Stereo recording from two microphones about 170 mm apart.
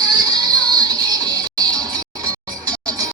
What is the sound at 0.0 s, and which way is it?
Music, 25° right (ahead or behind).